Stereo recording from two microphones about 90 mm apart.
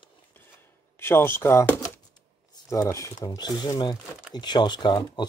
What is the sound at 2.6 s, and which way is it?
Speech, 35° left (ahead or behind).